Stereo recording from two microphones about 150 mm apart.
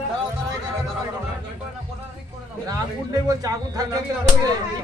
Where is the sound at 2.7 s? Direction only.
25° right (ahead or behind).